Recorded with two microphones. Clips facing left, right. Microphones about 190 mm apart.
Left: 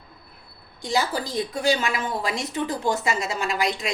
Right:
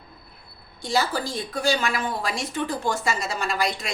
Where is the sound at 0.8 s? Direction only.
20° left (ahead or behind).